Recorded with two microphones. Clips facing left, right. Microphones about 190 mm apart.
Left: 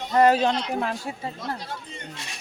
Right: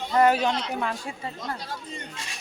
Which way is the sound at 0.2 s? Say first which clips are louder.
Left 2 dB; 30° left (ahead or behind).